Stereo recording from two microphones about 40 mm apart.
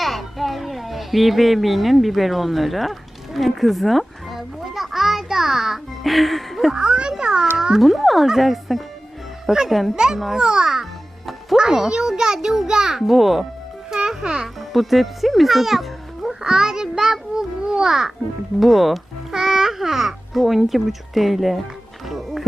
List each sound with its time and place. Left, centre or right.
0.0 s a child's voice: centre
6.7 s a child's voice: right
7.8 s speech: centre
9.9 s a child's voice: centre
14.1 s a child's voice: centre
14.4 s a child's voice: centre
16.4 s child singing: centre
17.7 s music: centre
18.6 s speech: centre
19.3 s a child's voice: centre
22.1 s music: centre